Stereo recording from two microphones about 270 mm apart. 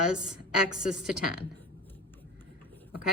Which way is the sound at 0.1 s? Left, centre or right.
Centre.